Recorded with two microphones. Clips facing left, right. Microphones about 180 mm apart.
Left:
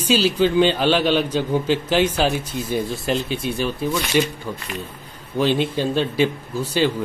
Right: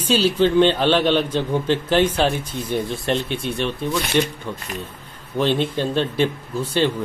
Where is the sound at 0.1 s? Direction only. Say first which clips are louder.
Right 1 dB; 5° left (ahead or behind).